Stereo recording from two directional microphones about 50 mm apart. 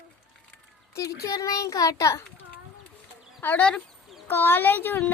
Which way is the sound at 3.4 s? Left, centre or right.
Left.